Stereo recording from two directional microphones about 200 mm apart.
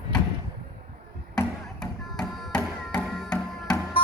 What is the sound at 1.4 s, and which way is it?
Music, 5° left (ahead or behind).